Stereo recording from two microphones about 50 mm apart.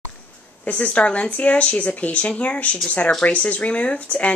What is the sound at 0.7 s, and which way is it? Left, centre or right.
Speech, left.